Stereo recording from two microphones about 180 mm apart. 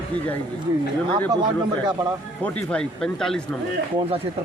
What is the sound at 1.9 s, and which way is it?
Speech, 20° right (ahead or behind).